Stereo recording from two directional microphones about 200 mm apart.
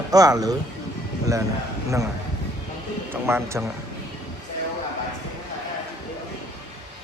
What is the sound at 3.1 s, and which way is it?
Speech, 10° right (ahead or behind).